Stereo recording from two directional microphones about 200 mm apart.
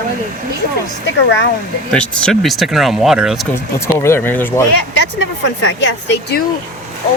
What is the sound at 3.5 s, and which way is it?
Speech, 15° left (ahead or behind).